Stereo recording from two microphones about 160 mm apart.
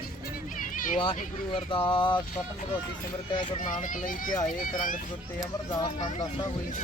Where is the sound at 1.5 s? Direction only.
35° left (ahead or behind).